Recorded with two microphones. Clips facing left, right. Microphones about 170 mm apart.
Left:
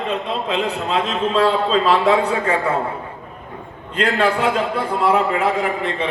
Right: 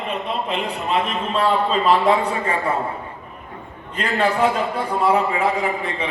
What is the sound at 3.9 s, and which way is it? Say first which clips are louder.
A man's voice: left 2 dB; 80° left.